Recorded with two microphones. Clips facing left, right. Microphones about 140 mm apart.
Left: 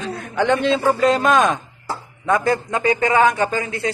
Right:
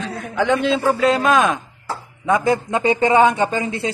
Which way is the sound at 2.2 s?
20° right (ahead or behind).